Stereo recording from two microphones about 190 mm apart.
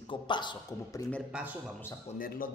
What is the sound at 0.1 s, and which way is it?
Speech, 25° left (ahead or behind).